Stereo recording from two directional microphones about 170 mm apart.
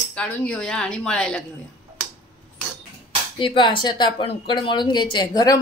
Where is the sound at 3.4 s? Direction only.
30° left (ahead or behind).